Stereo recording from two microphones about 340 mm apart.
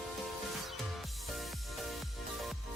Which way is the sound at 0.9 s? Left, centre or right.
Centre.